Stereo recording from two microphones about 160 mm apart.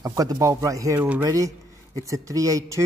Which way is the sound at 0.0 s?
25° right (ahead or behind).